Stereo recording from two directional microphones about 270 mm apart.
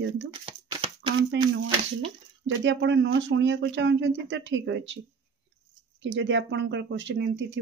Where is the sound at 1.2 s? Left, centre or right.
Right.